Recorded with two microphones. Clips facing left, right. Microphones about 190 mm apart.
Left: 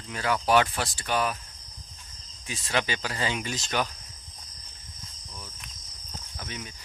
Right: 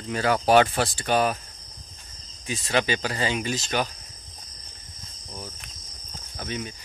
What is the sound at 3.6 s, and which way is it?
Speech, 25° right (ahead or behind).